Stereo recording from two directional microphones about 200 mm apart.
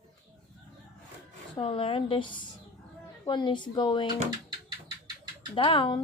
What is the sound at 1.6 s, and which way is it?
Speech, 25° left (ahead or behind).